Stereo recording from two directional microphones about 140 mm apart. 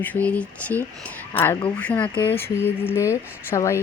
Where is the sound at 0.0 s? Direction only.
10° left (ahead or behind).